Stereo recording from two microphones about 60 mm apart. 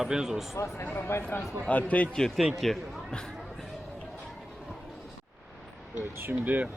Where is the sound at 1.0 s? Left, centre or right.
Left.